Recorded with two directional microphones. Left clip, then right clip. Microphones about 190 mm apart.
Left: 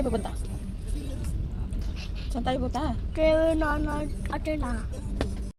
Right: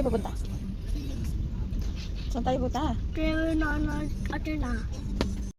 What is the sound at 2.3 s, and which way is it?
A woman's voice, 20° left (ahead or behind).